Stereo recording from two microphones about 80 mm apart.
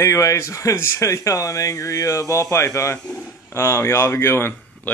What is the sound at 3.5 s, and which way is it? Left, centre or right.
Speech, left.